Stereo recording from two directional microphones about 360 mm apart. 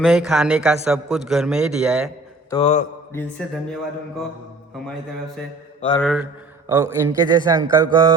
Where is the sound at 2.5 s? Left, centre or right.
Centre.